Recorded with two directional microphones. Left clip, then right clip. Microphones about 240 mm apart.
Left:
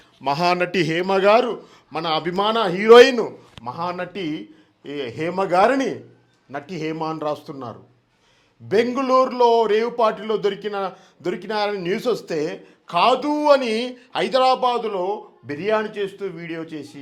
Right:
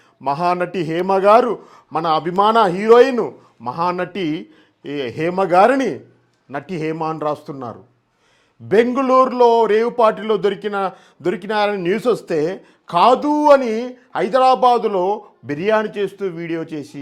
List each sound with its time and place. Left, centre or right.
0.2 s a man's voice: centre
1.5 s speech: right
1.9 s speech: right
2.1 s a man's voice: centre
2.4 s speech: right
3.2 s a man's voice: right
13.7 s a man's voice: right